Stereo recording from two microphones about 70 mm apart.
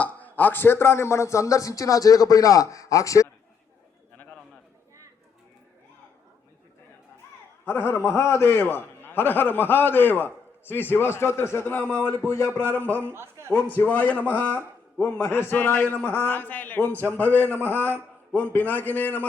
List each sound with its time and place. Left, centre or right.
0.0 s a man's voice: left
7.6 s a man's voice: left
13.1 s a man's voice: right
13.6 s a man's voice: left